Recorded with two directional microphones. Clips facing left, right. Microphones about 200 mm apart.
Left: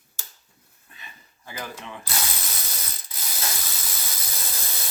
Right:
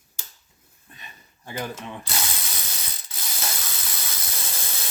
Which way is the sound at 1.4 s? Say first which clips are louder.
Right 4 dB; 25° right (ahead or behind).